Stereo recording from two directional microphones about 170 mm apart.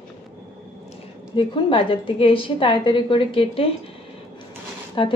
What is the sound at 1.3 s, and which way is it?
A woman's voice, 30° left (ahead or behind).